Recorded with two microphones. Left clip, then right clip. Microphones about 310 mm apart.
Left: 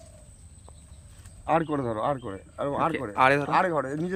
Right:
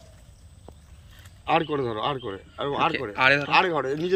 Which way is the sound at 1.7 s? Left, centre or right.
Centre.